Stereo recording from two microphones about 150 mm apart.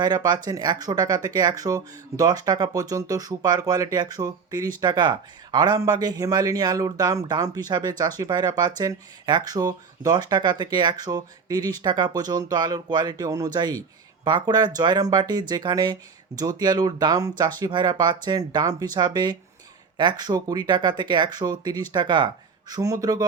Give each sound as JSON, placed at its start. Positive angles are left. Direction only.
{"t": 0.0, "sound": "speech", "side_deg": -30}